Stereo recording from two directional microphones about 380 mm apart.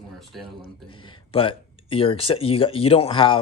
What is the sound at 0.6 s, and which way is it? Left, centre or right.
Speech, centre.